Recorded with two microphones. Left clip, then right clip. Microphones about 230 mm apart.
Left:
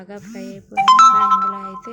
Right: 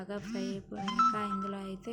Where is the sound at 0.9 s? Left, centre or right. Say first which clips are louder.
Left 19 dB; left.